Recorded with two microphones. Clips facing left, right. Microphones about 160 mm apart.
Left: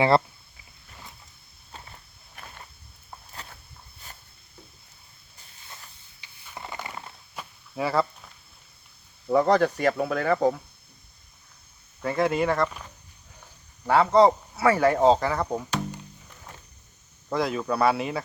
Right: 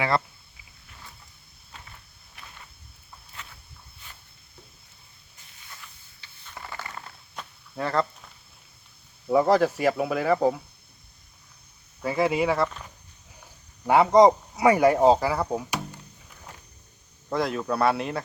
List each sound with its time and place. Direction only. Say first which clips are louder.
1.7 s walk: left 3 dB; 35° left (ahead or behind)
2.4 s a sound: left 3 dB; 50° left (ahead or behind)
6.1 s a sound: left 2 dB; 15° left (ahead or behind)
9.2 s speech: even; 5° right (ahead or behind)
12.0 s speech: even; 5° right (ahead or behind)
13.8 s speech: right 2 dB; 15° right (ahead or behind)
17.2 s speech: even; centre (ahead or behind)